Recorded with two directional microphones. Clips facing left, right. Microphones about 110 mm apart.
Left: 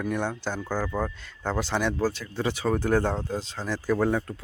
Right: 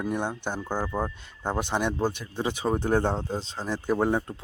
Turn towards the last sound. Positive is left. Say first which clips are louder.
# even
turn(degrees=-25)  # may be behind; listen again after turning